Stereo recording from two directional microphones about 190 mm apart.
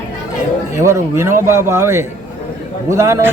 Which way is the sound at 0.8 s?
15° right (ahead or behind).